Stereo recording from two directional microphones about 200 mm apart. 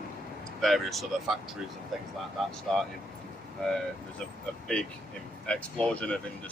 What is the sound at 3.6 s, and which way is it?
Speech, 5° left (ahead or behind).